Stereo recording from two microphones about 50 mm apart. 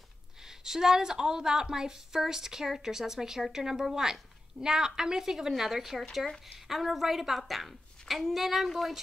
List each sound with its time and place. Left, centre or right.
0.4 s a woman's voice: centre